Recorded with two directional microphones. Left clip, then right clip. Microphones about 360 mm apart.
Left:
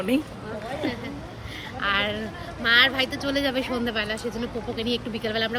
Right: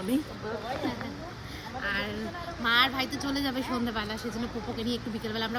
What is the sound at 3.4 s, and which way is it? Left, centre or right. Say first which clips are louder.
Speech: left 6 dB; right.